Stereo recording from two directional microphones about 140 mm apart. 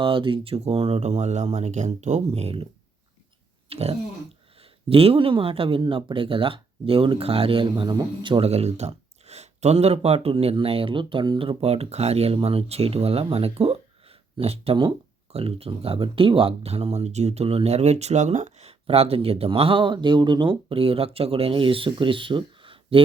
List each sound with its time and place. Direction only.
0.0 s speech: 40° right (ahead or behind)
3.7 s speech: 45° right (ahead or behind)
8.4 s speech: 50° right (ahead or behind)